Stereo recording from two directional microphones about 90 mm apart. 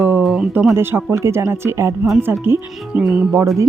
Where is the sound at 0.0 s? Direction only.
30° right (ahead or behind).